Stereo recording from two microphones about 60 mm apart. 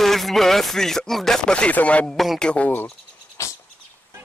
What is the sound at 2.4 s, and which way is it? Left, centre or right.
Speech, left.